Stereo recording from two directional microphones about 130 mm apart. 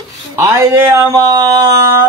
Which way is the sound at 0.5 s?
25° right (ahead or behind).